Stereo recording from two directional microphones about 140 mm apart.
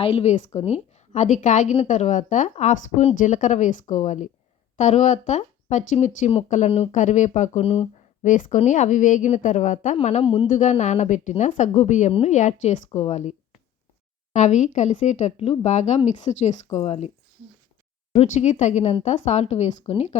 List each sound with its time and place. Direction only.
0.0 s speech: 45° left (ahead or behind)
14.3 s a woman's voice: 60° left (ahead or behind)
18.1 s a woman's voice: 55° left (ahead or behind)